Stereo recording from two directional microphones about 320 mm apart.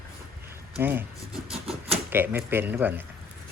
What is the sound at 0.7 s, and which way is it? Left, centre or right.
Speech, centre.